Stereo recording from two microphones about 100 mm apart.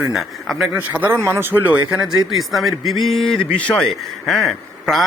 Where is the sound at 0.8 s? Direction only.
15° right (ahead or behind).